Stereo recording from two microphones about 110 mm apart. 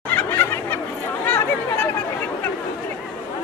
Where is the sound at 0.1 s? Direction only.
20° left (ahead or behind).